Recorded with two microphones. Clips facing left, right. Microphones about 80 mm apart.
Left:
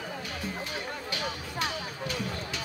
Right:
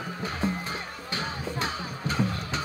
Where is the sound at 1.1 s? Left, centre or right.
Right.